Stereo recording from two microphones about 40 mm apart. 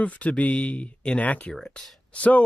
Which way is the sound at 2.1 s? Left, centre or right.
Left.